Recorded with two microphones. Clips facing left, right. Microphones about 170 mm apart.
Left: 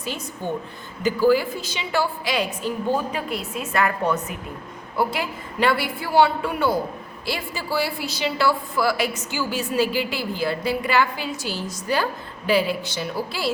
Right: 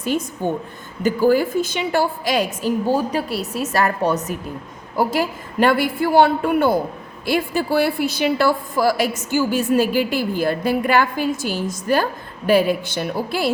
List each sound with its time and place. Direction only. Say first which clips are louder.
0.0 s a woman's voice: right 8 dB; 50° right (ahead or behind)
2.8 s a woman's voice: right 2 dB; 35° right (ahead or behind); by 13.5 s 55° right (ahead or behind)